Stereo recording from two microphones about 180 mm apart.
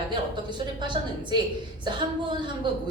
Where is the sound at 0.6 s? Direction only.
25° right (ahead or behind).